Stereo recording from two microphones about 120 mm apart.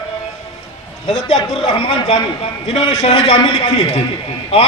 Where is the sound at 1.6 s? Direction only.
55° left (ahead or behind).